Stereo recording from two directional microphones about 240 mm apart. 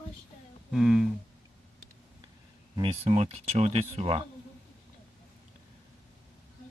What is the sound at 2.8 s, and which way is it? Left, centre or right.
Speech, right.